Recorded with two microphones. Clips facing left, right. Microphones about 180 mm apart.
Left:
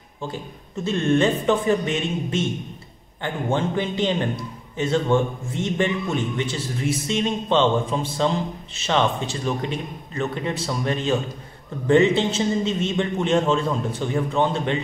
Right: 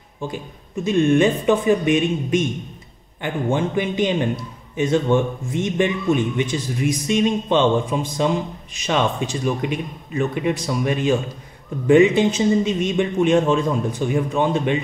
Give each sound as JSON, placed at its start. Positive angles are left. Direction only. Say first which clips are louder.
{"t": 0.8, "sound": "a man's voice", "louder": "right 4 dB", "side_deg": -15}